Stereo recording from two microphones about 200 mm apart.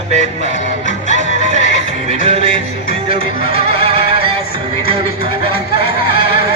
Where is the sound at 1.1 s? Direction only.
35° right (ahead or behind).